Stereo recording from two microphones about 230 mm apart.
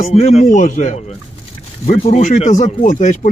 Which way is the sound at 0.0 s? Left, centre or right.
Left.